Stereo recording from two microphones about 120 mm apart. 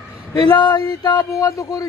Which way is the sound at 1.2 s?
25° left (ahead or behind).